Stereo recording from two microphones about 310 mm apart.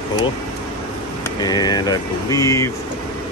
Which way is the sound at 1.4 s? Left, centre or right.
Centre.